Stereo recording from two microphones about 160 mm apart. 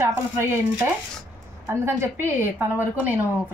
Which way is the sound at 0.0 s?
15° right (ahead or behind).